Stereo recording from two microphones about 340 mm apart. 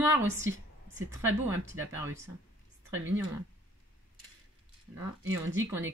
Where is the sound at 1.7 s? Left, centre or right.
Right.